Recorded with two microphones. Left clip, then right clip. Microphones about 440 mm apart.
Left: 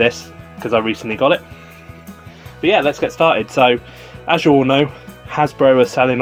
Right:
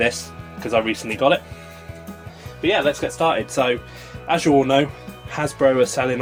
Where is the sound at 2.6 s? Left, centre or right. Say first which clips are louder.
Left 5 dB; left.